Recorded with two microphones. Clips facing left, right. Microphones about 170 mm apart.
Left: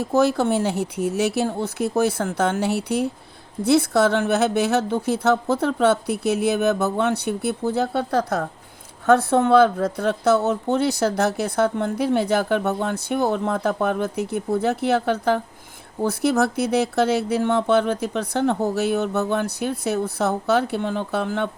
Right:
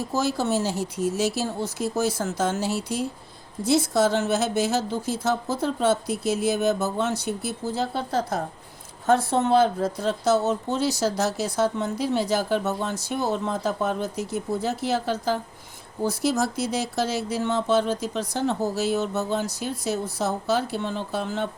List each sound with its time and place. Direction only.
0.0 s speech: 60° left (ahead or behind)